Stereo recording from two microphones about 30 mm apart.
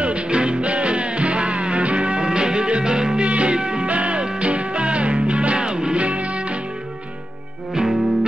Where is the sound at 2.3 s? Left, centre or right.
Right.